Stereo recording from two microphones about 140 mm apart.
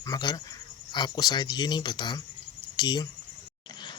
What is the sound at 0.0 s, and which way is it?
A man's voice, 30° left (ahead or behind).